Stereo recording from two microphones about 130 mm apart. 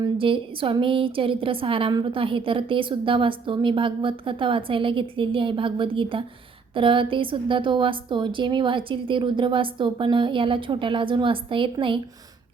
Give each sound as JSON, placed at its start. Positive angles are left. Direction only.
{"t": 0.2, "sound": "a woman's voice", "side_deg": -40}